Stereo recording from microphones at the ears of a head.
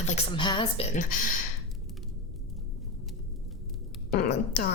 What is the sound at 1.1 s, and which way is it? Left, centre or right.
Speech, left.